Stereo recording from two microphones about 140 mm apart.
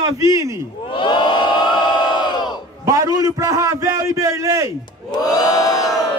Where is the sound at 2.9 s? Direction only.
25° right (ahead or behind).